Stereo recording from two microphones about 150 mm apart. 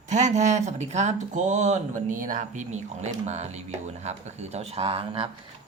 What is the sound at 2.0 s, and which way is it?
Speech, 65° right (ahead or behind).